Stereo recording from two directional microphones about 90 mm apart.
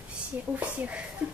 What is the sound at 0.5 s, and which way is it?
Speech, 15° right (ahead or behind).